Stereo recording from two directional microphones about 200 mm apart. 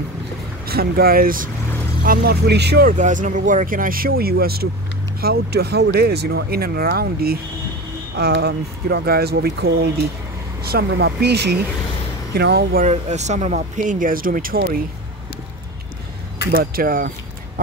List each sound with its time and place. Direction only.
0.7 s speech: 50° right (ahead or behind)
3.0 s speech: 40° right (ahead or behind)
12.8 s speech: 35° right (ahead or behind)
16.5 s speech: 45° right (ahead or behind)